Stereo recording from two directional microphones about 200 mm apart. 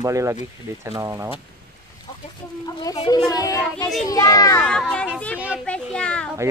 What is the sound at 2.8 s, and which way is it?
Speech, 20° left (ahead or behind).